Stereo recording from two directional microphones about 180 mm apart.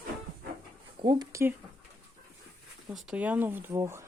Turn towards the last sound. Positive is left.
turn(degrees=-15)  # may be behind; listen again after turning